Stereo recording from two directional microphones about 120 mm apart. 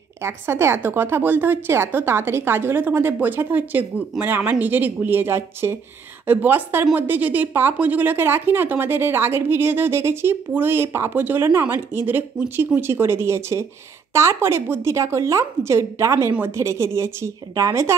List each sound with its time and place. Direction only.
0.2 s a woman's voice: 20° right (ahead or behind)